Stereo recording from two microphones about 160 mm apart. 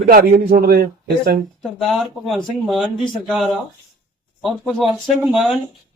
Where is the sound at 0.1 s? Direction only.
60° right (ahead or behind).